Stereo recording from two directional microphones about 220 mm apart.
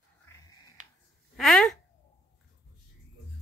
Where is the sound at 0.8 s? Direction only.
35° right (ahead or behind).